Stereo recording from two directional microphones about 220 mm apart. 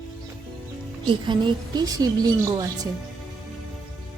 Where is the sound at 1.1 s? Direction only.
20° right (ahead or behind).